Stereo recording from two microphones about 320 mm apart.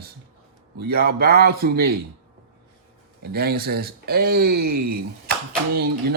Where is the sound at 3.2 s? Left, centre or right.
Right.